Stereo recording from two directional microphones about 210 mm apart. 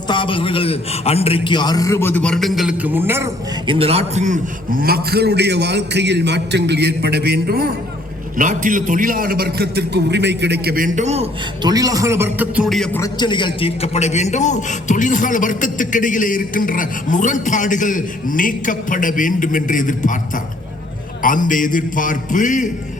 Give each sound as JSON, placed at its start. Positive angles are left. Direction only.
{"t": 0.1, "sound": "a man's voice", "side_deg": 25}
{"t": 3.7, "sound": "a man's voice", "side_deg": -25}
{"t": 11.7, "sound": "a man's voice", "side_deg": -15}
{"t": 13.0, "sound": "a man's voice", "side_deg": 20}